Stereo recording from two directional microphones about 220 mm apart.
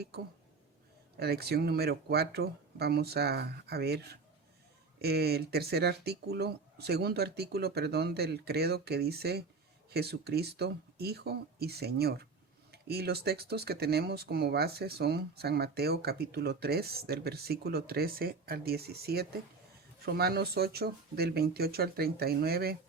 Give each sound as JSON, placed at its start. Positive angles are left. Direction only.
{"t": 1.1, "sound": "speech", "side_deg": -45}